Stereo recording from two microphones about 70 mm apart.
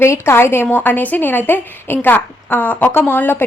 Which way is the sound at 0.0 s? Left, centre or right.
Left.